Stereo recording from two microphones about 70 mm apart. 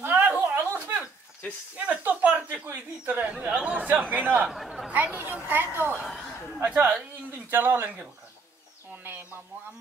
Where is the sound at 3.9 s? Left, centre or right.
Right.